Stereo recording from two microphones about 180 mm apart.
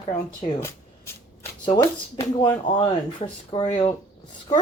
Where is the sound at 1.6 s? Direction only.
20° left (ahead or behind).